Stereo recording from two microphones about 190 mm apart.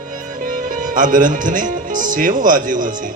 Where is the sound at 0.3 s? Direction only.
45° right (ahead or behind).